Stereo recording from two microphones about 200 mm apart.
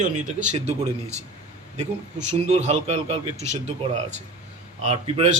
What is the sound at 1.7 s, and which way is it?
A man's voice, 35° right (ahead or behind).